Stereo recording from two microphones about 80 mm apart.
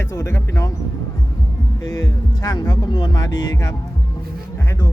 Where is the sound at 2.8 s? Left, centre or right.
Left.